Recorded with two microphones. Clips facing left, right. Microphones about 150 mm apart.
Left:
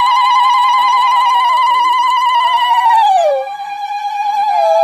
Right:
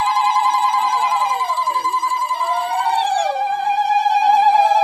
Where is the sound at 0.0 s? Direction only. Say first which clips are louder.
Left 5 dB; 90° left.